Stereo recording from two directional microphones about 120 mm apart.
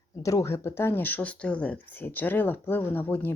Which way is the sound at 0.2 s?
30° left (ahead or behind).